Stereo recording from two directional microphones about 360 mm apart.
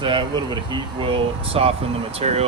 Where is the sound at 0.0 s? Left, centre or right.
Centre.